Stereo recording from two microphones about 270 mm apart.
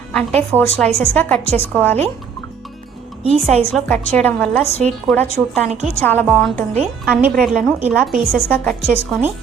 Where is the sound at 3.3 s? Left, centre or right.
Right.